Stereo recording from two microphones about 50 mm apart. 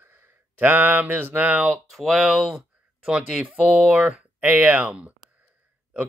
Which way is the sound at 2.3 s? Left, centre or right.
Centre.